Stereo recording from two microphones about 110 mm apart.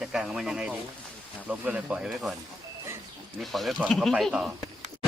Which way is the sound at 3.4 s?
Centre (ahead or behind).